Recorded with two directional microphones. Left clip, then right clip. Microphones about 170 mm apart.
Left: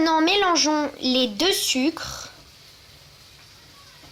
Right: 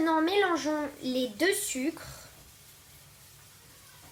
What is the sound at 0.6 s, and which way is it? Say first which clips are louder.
Speech: left 10 dB; 15° left (ahead or behind).